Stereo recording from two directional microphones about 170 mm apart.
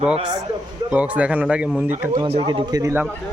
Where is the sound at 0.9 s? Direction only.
10° right (ahead or behind).